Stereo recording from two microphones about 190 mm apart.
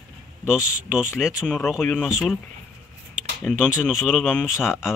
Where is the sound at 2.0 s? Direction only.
5° right (ahead or behind).